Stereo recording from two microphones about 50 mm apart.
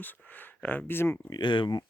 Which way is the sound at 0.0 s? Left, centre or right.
Left.